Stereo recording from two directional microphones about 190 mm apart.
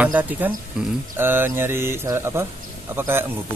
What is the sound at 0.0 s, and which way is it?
A man's voice, 10° right (ahead or behind).